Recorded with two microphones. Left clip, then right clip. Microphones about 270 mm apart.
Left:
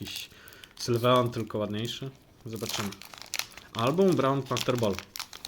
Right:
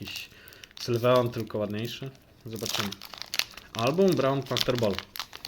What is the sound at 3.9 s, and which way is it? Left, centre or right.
Speech, centre.